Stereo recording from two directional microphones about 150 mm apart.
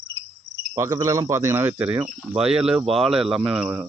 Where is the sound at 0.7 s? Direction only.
20° right (ahead or behind); by 3.6 s 5° right (ahead or behind).